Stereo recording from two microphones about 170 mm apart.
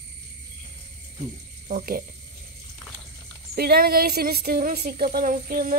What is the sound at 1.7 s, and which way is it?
Speech, 60° right (ahead or behind).